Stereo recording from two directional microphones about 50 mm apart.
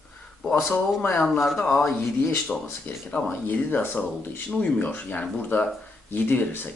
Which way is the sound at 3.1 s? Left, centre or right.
Left.